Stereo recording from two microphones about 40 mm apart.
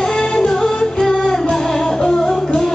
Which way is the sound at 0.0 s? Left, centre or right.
Centre.